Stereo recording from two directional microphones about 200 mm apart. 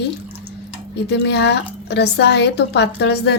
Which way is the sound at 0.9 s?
60° left (ahead or behind).